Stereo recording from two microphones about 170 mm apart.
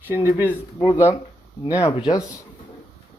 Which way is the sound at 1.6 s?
20° left (ahead or behind).